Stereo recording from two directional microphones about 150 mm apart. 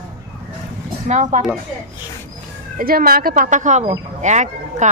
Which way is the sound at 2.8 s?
75° right (ahead or behind).